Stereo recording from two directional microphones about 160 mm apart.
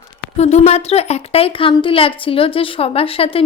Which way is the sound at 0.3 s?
45° left (ahead or behind).